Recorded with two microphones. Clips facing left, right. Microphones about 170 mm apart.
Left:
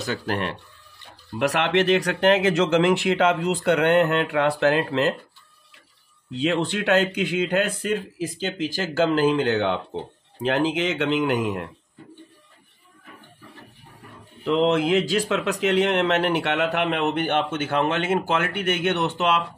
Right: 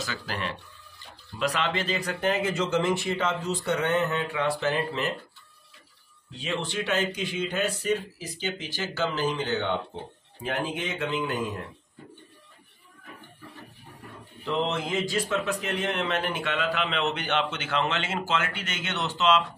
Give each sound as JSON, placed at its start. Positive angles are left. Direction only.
{"t": 0.0, "sound": "speech", "side_deg": 60}
{"t": 1.4, "sound": "speech", "side_deg": 70}
{"t": 6.4, "sound": "speech", "side_deg": 65}
{"t": 10.4, "sound": "speech", "side_deg": 90}
{"t": 14.5, "sound": "speech", "side_deg": 80}